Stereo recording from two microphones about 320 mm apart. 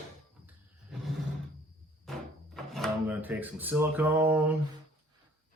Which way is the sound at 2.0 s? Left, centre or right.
Centre.